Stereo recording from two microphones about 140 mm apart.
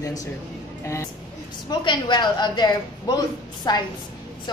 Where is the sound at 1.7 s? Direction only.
30° left (ahead or behind).